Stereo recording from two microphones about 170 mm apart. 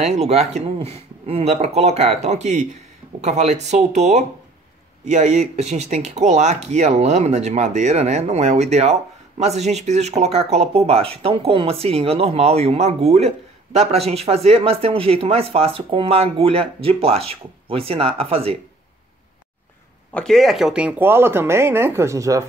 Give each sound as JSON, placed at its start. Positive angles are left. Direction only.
{"t": 0.0, "sound": "speech", "side_deg": -40}
{"t": 20.1, "sound": "speech", "side_deg": 5}